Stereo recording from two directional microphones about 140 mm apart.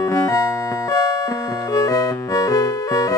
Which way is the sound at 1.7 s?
25° left (ahead or behind).